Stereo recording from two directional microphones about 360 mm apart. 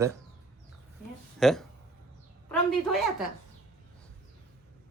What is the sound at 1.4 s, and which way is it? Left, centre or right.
Speech, centre.